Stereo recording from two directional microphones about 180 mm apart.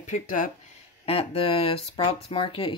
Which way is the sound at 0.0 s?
45° left (ahead or behind).